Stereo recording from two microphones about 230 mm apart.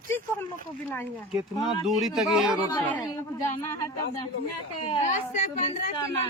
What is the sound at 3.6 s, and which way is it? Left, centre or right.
Speech, centre.